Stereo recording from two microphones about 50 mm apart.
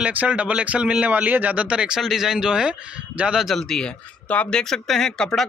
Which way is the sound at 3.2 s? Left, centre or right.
Right.